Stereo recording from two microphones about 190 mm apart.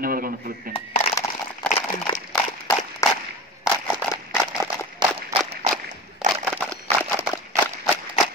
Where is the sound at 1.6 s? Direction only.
5° left (ahead or behind).